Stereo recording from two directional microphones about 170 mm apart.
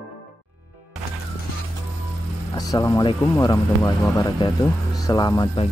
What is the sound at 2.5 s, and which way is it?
Speech, 20° left (ahead or behind).